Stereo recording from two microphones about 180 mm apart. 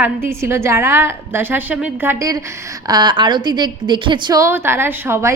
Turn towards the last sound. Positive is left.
turn(degrees=-15)  # may be behind; listen again after turning